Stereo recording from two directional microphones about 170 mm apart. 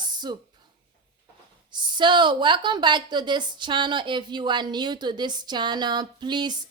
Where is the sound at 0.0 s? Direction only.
25° right (ahead or behind).